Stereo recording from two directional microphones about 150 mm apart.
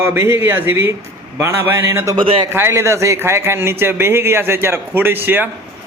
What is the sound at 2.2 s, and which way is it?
Speech, 35° right (ahead or behind).